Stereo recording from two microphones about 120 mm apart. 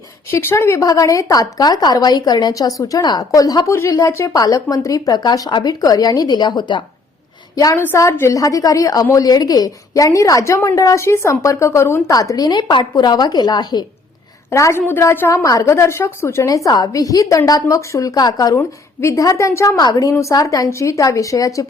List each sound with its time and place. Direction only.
0.3 s a woman's voice: 20° left (ahead or behind); by 13.8 s 35° left (ahead or behind)
14.5 s a woman's voice: 25° left (ahead or behind)